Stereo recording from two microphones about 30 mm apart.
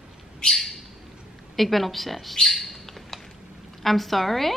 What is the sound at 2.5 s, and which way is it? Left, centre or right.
Bird, centre.